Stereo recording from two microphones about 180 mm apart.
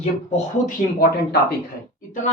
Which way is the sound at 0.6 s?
60° left (ahead or behind).